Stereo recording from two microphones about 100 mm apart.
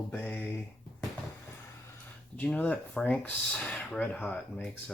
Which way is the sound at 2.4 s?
15° left (ahead or behind).